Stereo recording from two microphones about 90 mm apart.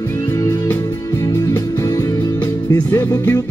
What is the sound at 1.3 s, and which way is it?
Music, 30° left (ahead or behind).